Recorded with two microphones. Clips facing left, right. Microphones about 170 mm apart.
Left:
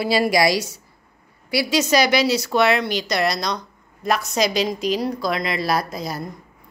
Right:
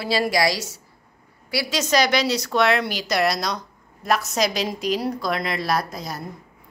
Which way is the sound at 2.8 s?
5° right (ahead or behind).